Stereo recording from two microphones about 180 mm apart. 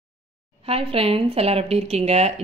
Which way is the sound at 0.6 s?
30° right (ahead or behind).